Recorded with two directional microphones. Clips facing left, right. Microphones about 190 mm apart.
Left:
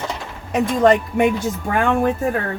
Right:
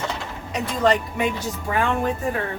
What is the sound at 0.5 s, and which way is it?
Speech, 50° left (ahead or behind).